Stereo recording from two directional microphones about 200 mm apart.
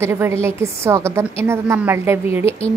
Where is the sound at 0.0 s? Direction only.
15° right (ahead or behind).